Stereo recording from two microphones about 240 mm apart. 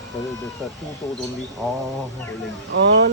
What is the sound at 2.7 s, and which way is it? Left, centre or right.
Speech, right.